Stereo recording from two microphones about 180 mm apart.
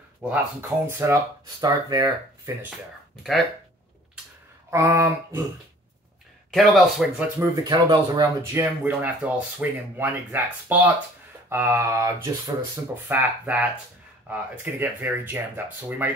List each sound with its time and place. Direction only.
0.3 s speech: 10° right (ahead or behind)
4.6 s speech: 15° right (ahead or behind)
6.5 s speech: centre (ahead or behind)
7.3 s speech: 20° right (ahead or behind)